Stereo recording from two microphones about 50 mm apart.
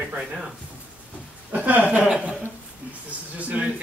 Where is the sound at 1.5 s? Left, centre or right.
Right.